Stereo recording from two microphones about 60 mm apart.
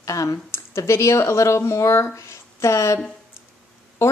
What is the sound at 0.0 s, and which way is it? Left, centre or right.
Speech, left.